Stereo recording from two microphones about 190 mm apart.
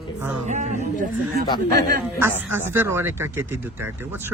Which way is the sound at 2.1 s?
10° right (ahead or behind).